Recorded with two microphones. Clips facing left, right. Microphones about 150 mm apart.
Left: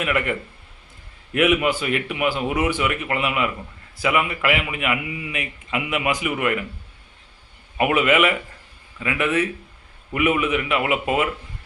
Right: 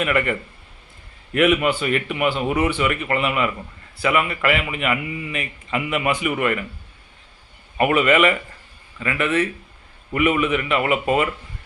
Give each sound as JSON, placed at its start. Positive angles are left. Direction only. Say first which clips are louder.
{"t": 0.0, "sound": "a man's voice", "louder": "right 2 dB", "side_deg": 5}
{"t": 7.8, "sound": "a man's voice", "louder": "right 2 dB", "side_deg": 5}